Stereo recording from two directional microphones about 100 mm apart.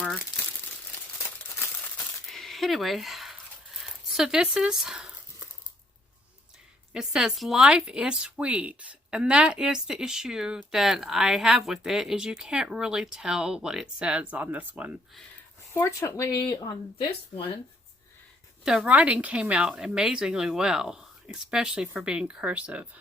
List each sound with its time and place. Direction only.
0.0 s crumpling: 5° left (ahead or behind)
2.3 s a sound: centre (ahead or behind)
6.9 s speech: 5° right (ahead or behind)
15.7 s speech: 25° left (ahead or behind)
16.4 s speech: 45° left (ahead or behind)
18.6 s speech: 5° right (ahead or behind)